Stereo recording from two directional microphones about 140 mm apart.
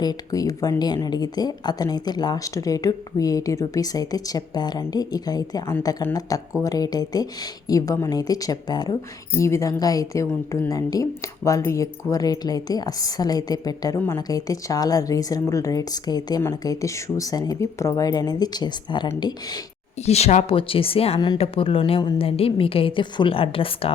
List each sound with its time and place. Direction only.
0.0 s speech: 25° left (ahead or behind)
20.0 s a woman's voice: 50° left (ahead or behind)